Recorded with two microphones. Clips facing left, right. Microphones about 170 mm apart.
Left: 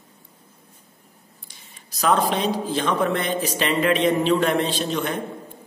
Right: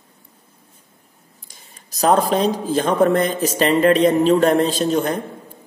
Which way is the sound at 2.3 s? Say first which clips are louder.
Right 5 dB; 45° right (ahead or behind).